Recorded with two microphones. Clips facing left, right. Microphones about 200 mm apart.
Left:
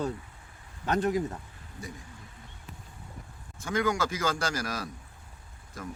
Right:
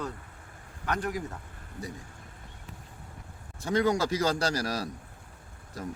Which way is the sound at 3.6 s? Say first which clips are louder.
Right 3 dB; 35° right (ahead or behind).